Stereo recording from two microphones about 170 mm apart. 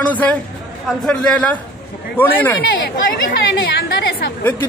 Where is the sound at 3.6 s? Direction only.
70° left (ahead or behind).